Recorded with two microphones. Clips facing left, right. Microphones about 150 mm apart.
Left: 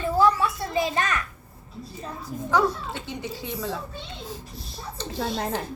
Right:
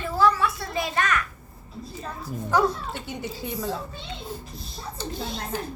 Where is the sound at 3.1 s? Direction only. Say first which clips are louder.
Right 1 dB; 5° right (ahead or behind).